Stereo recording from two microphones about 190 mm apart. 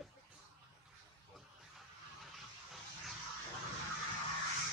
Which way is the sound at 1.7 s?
Centre (ahead or behind).